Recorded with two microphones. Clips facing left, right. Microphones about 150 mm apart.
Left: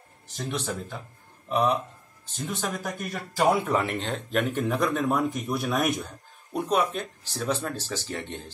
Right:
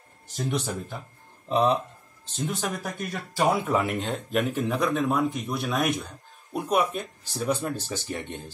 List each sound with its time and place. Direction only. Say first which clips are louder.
0.4 s speech: right 3 dB; 15° right (ahead or behind)
1.5 s speech: right 2 dB; 30° right (ahead or behind)
2.4 s speech: right 1 dB; centre (ahead or behind)